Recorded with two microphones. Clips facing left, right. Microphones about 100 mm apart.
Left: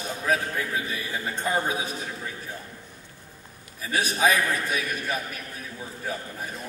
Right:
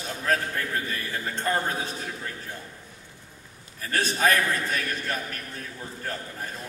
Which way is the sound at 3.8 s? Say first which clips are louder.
Left 1 dB; 10° left (ahead or behind).